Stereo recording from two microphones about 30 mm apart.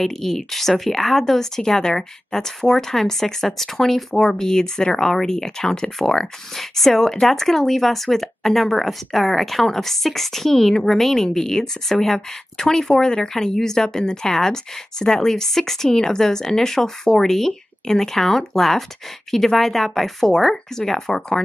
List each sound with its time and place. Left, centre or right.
0.0 s speech: centre
6.5 s speech: centre
12.9 s speech: left; by 15.9 s centre
15.9 s speech: centre